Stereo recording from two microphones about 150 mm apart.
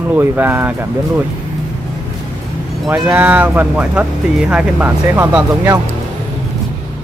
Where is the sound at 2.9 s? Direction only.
10° right (ahead or behind).